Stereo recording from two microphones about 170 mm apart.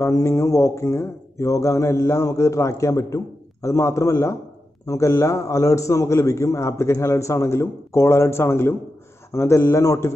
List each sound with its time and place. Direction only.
0.0 s a man's voice: 20° left (ahead or behind)